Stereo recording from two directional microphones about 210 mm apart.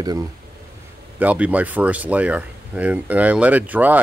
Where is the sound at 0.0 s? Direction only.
20° right (ahead or behind).